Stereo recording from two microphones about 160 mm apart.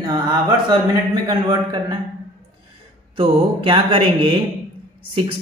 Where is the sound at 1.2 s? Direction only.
25° right (ahead or behind).